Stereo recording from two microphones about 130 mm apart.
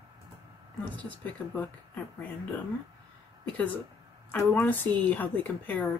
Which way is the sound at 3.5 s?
10° left (ahead or behind).